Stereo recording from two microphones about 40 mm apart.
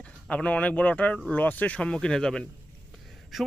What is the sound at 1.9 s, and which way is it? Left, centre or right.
Speech, centre.